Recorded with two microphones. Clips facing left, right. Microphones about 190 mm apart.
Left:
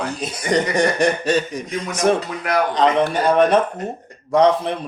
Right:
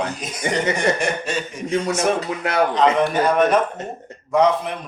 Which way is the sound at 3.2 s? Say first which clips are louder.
Left 4 dB; 30° left (ahead or behind).